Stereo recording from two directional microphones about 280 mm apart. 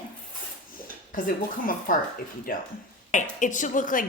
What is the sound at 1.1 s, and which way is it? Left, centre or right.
Speech, left.